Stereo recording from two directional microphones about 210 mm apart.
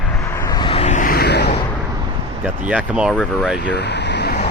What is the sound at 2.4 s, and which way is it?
Speech, 5° right (ahead or behind).